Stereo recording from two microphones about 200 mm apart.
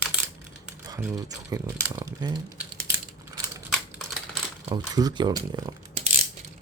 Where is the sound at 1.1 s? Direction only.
15° right (ahead or behind).